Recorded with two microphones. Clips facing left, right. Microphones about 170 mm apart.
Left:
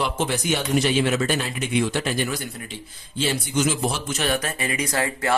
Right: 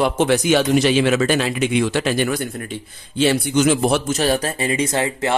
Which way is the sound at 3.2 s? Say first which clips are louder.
Right 7 dB; 70° right (ahead or behind).